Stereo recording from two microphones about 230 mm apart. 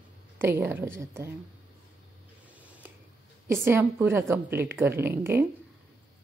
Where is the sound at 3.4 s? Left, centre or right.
Centre.